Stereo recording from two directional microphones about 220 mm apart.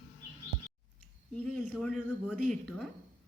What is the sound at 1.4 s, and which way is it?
Speech, 5° left (ahead or behind).